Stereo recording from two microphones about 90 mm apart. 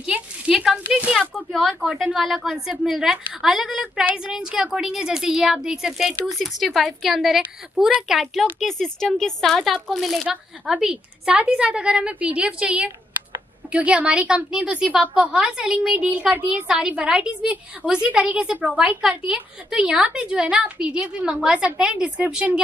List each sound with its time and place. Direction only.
0.0 s a woman's voice: 10° right (ahead or behind)
1.5 s a woman's voice: centre (ahead or behind); by 22.6 s 15° right (ahead or behind)